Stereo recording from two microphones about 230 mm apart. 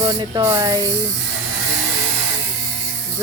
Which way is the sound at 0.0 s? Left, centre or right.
Centre.